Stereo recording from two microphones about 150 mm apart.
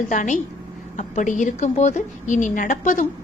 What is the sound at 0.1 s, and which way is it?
A woman's voice, 55° left (ahead or behind).